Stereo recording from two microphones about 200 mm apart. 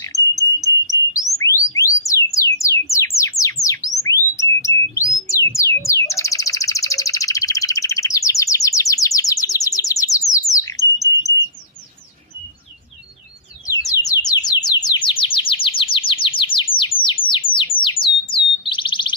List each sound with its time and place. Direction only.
0.0 s cricket: 15° left (ahead or behind)
1.4 s a sound: 15° left (ahead or behind)
2.9 s bird: 15° left (ahead or behind)
13.7 s bird: 15° left (ahead or behind)